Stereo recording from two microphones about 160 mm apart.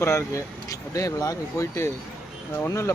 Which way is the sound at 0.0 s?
15° left (ahead or behind).